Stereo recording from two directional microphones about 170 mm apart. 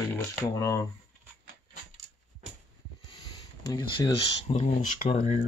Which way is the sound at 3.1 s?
25° left (ahead or behind).